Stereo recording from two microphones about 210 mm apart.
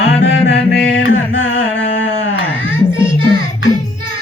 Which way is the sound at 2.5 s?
10° left (ahead or behind).